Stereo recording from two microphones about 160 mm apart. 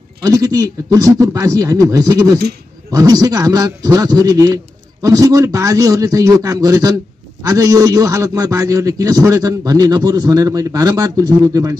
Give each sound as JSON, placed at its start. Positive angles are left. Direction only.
{"t": 0.2, "sound": "a man's voice", "side_deg": -20}